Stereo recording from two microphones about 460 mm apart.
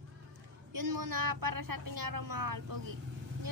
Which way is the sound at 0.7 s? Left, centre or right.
Right.